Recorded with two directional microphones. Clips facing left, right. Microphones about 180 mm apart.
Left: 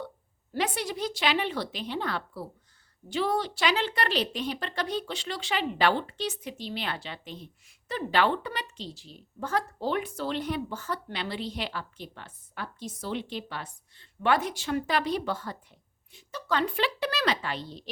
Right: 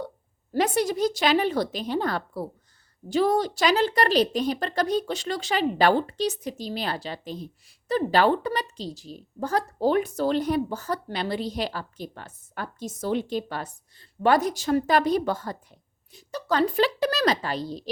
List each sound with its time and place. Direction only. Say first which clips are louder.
0.5 s a woman's voice: right 7 dB; 45° right (ahead or behind)